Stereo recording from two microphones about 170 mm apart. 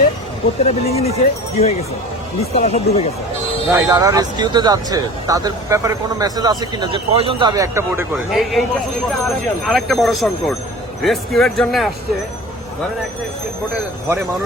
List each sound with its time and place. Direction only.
0.6 s speech: 35° left (ahead or behind)
3.7 s speech: 20° right (ahead or behind)
8.1 s speech: centre (ahead or behind)
9.6 s speech: centre (ahead or behind)